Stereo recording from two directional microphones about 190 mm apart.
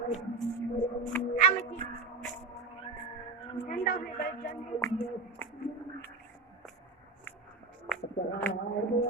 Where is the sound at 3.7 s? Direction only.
55° left (ahead or behind).